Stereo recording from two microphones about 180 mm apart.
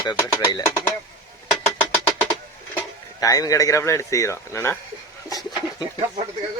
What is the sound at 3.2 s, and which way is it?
Speech, 20° left (ahead or behind).